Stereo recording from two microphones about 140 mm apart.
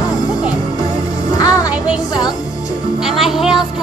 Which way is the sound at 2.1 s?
30° left (ahead or behind).